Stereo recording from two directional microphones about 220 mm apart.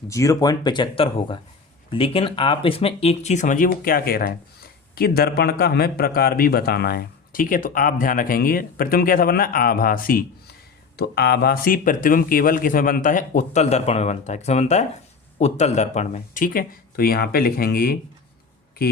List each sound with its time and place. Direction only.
0.1 s speech: 15° left (ahead or behind); by 18.9 s 45° left (ahead or behind)